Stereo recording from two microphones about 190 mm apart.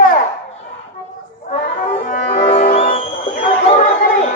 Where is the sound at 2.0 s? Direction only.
40° left (ahead or behind).